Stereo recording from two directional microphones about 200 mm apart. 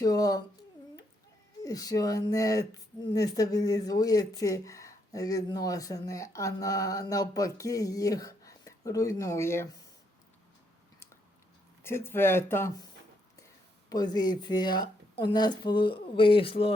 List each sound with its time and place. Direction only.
0.0 s speech: 20° left (ahead or behind)
1.6 s speech: 20° left (ahead or behind)
11.8 s speech: 10° left (ahead or behind)
13.9 s speech: 20° left (ahead or behind)